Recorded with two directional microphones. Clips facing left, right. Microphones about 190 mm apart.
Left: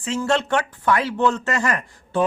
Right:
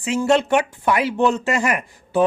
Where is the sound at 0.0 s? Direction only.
10° right (ahead or behind).